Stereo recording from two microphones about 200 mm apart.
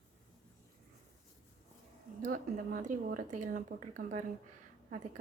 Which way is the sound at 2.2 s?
45° right (ahead or behind).